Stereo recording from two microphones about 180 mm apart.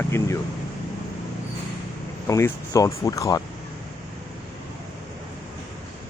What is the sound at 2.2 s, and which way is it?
Speech, 15° left (ahead or behind).